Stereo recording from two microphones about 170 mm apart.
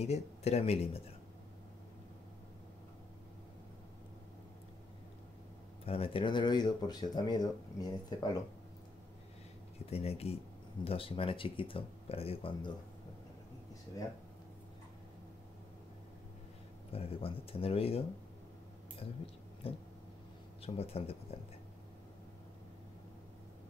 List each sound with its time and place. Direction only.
0.0 s speech: 40° left (ahead or behind)
5.9 s speech: 35° left (ahead or behind)
9.8 s speech: 35° left (ahead or behind)
16.9 s speech: 35° left (ahead or behind)
19.6 s speech: 35° left (ahead or behind)